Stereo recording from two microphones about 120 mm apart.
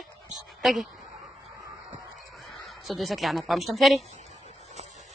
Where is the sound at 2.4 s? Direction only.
Centre (ahead or behind).